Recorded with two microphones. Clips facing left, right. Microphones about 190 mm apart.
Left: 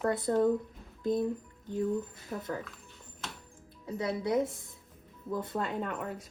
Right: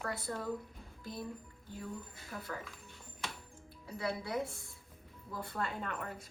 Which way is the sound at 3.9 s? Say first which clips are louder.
Left 7 dB; 20° left (ahead or behind).